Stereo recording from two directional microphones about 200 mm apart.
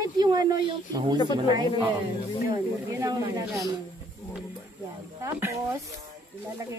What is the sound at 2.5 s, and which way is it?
Speech, 15° right (ahead or behind).